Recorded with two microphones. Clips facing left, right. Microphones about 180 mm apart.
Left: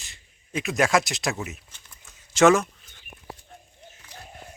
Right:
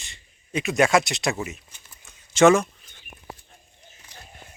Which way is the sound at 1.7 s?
Centre (ahead or behind).